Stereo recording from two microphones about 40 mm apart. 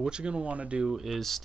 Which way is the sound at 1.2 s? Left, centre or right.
Centre.